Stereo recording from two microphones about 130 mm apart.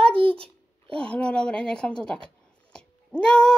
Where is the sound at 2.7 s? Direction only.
5° left (ahead or behind).